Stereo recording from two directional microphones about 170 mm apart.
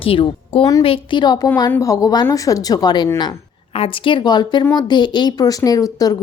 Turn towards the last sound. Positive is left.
turn(degrees=20)  # may be behind; listen again after turning